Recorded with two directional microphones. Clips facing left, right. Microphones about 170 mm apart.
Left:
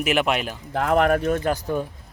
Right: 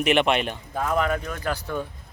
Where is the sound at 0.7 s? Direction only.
65° left (ahead or behind); by 1.4 s 50° left (ahead or behind).